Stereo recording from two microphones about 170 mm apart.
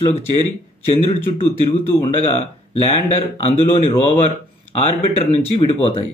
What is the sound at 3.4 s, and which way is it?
Speech, 35° left (ahead or behind).